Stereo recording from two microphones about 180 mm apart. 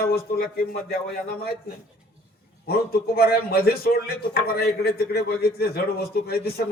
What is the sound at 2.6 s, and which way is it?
A man's voice, 60° left (ahead or behind).